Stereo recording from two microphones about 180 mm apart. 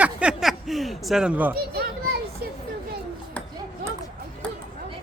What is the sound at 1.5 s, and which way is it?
Children playing, 60° right (ahead or behind).